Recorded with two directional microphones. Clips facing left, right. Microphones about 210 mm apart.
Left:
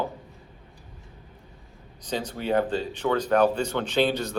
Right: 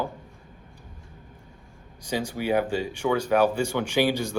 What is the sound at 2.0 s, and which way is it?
Speech, 10° right (ahead or behind).